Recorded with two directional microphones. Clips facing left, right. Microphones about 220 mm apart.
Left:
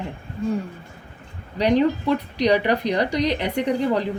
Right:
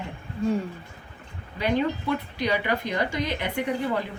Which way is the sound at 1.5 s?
40° left (ahead or behind).